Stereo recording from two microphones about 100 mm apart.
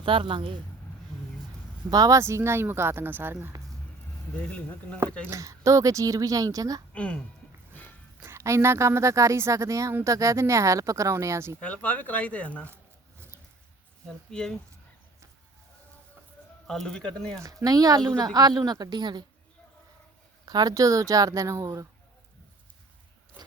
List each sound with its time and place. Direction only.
0.0 s speech: 60° right (ahead or behind)
1.9 s speech: 35° right (ahead or behind); by 3.3 s 20° right (ahead or behind)
4.4 s speech: 10° left (ahead or behind)
5.3 s speech: 30° right (ahead or behind)
6.9 s speech: 15° left (ahead or behind)
8.2 s speech: 25° right (ahead or behind)
11.6 s speech: 15° left (ahead or behind)
12.6 s a sound: 25° right (ahead or behind)
14.3 s speech: 5° left (ahead or behind)
16.6 s speech: 5° left (ahead or behind)
17.4 s speech: 40° right (ahead or behind)
20.4 s speech: 40° right (ahead or behind)